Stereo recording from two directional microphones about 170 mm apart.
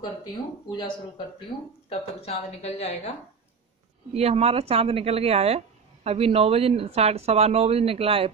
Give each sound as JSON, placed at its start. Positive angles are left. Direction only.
{"t": 0.0, "sound": "speech", "side_deg": 25}
{"t": 1.9, "sound": "a woman's voice", "side_deg": 35}
{"t": 4.1, "sound": "speech", "side_deg": -40}